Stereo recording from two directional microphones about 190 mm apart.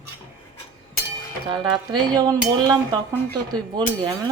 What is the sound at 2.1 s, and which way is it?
Speech, 20° right (ahead or behind).